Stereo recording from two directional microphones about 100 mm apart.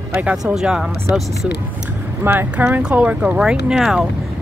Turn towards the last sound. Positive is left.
turn(degrees=-5)  # may be behind; listen again after turning